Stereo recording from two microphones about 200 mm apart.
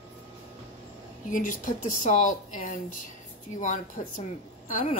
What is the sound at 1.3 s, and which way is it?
A woman's voice, 40° left (ahead or behind).